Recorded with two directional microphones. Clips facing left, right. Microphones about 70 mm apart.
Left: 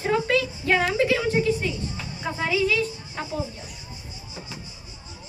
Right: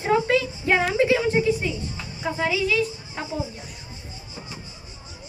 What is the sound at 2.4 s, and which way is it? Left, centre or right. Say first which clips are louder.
Speech: even; centre.